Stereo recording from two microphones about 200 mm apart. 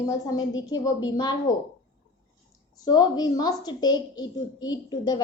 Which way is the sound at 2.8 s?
20° left (ahead or behind).